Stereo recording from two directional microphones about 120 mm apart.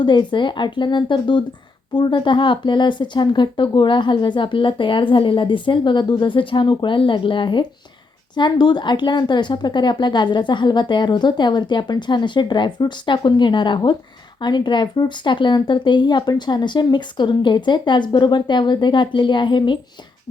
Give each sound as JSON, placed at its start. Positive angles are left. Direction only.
{"t": 0.0, "sound": "speech", "side_deg": 40}